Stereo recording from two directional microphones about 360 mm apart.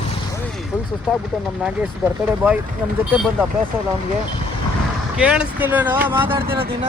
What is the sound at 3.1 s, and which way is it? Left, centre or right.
Speech, centre.